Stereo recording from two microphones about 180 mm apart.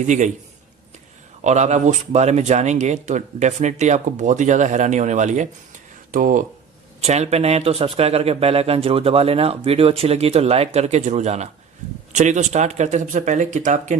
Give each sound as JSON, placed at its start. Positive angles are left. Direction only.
{"t": 0.0, "sound": "a man's voice", "side_deg": -40}
{"t": 1.5, "sound": "speech", "side_deg": -40}
{"t": 7.0, "sound": "speech", "side_deg": -35}